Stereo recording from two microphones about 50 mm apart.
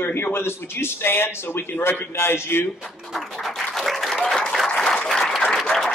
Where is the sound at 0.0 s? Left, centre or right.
Left.